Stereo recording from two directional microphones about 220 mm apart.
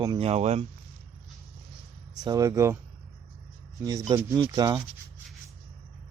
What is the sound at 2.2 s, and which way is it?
Speech, 15° right (ahead or behind).